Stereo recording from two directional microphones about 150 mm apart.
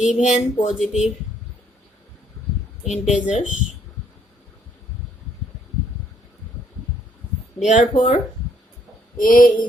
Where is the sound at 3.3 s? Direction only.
55° left (ahead or behind).